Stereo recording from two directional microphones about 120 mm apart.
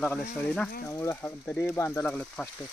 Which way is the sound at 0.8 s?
20° left (ahead or behind).